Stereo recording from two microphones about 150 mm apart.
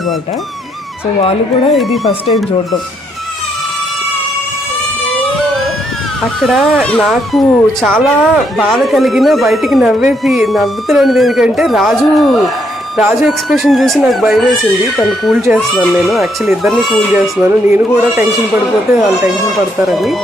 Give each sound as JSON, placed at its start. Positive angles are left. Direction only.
{"t": 1.2, "sound": "speech", "side_deg": 40}
{"t": 1.7, "sound": "speech", "side_deg": 0}
{"t": 6.4, "sound": "speech", "side_deg": 0}
{"t": 17.2, "sound": "speech", "side_deg": -10}
{"t": 19.9, "sound": "speech", "side_deg": 0}